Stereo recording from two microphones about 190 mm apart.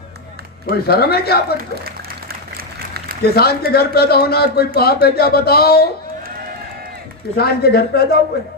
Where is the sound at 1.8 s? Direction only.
55° right (ahead or behind).